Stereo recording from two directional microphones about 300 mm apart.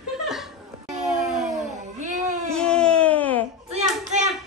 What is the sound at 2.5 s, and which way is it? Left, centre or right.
Baby cry, centre.